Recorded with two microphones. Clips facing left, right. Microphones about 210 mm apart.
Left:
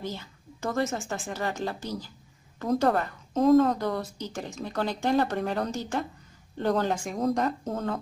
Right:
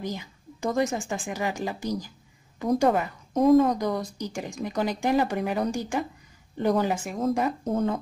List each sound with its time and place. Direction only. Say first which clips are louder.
0.0 s a woman's voice: right 3 dB; 15° right (ahead or behind)
7.4 s speech: right 4 dB; 15° right (ahead or behind)